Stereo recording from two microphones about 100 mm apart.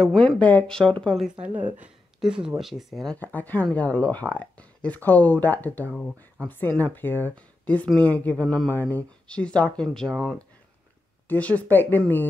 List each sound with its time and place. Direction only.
0.0 s speech: 5° left (ahead or behind)
1.4 s a woman's voice: 15° right (ahead or behind); by 3.2 s centre (ahead or behind)
3.2 s speech: 15° left (ahead or behind)
11.2 s speech: 15° left (ahead or behind)